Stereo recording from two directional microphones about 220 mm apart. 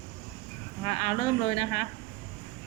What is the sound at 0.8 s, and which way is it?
Speech, 35° left (ahead or behind).